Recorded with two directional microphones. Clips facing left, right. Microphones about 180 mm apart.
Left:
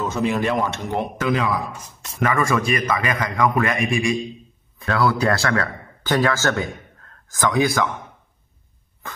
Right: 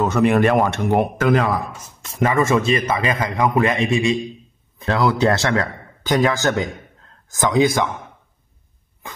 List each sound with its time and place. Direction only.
0.0 s speech: 65° right (ahead or behind); by 1.6 s 50° right (ahead or behind)
2.1 s a man's voice: 25° right (ahead or behind)